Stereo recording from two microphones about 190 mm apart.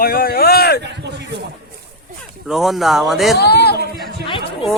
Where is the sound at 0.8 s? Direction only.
65° right (ahead or behind).